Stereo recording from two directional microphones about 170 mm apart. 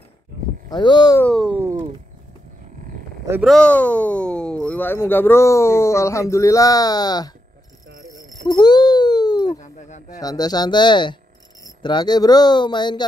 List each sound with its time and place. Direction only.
0.7 s speech: 25° left (ahead or behind)
1.2 s speech: centre (ahead or behind)
3.4 s speech: 5° left (ahead or behind); by 7.3 s 25° left (ahead or behind)
8.5 s baby cry: 25° left (ahead or behind)
9.5 s a sound: 45° left (ahead or behind)
10.1 s speech: 20° left (ahead or behind)